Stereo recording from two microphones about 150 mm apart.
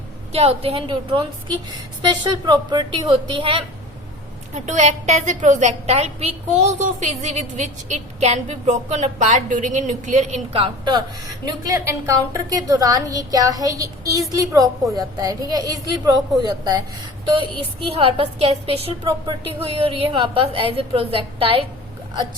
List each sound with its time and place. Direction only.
0.3 s a woman's voice: 40° right (ahead or behind)
4.5 s a woman's voice: 50° right (ahead or behind); by 11.0 s 35° right (ahead or behind)
11.4 s a woman's voice: 20° right (ahead or behind)
17.8 s a woman's voice: 40° right (ahead or behind)